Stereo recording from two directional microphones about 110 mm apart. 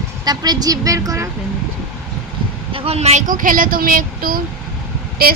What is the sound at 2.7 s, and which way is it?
Speech, 65° right (ahead or behind).